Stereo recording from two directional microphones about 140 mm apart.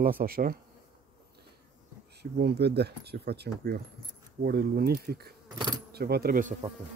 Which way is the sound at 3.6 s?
90° right.